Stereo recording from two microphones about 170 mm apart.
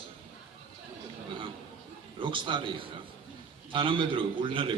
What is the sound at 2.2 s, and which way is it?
A man's voice, 30° right (ahead or behind).